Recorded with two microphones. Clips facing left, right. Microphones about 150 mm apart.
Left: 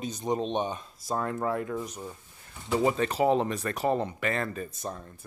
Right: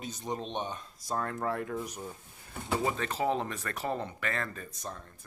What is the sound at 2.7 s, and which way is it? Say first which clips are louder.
Speech: left 6 dB; 20° left (ahead or behind).